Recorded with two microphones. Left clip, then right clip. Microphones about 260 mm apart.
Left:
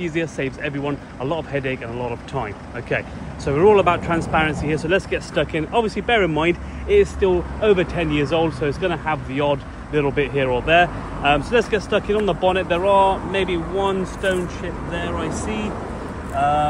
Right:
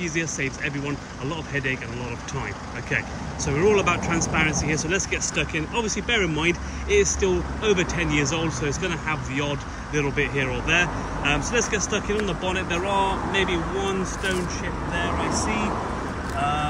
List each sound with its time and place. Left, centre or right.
0.0 s speech: centre
3.4 s speech: centre
15.3 s speech: centre
16.3 s speech: centre